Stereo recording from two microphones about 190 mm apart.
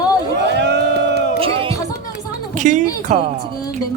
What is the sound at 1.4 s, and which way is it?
Music, 30° right (ahead or behind).